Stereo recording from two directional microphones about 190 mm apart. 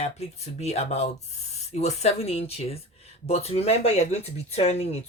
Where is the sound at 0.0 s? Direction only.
35° left (ahead or behind).